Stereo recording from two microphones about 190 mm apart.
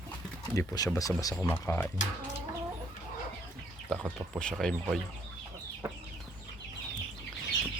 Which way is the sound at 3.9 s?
5° left (ahead or behind).